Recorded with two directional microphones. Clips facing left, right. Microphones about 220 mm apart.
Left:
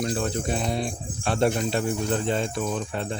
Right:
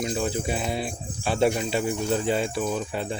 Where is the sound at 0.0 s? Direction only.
5° right (ahead or behind).